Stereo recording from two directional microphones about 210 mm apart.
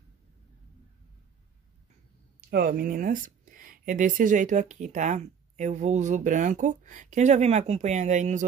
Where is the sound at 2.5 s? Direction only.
45° right (ahead or behind).